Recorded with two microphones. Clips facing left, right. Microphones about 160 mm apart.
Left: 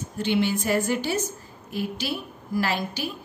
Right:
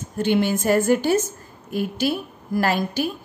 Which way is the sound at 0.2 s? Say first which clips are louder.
Right 4 dB; 50° right (ahead or behind).